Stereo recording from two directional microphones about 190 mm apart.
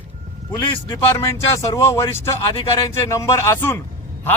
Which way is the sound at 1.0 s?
15° left (ahead or behind).